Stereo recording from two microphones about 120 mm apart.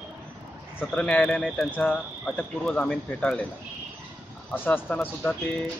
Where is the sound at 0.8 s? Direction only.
10° left (ahead or behind).